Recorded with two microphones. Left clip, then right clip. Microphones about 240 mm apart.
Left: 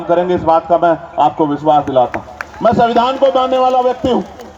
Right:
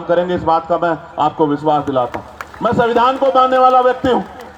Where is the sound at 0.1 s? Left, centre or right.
Right.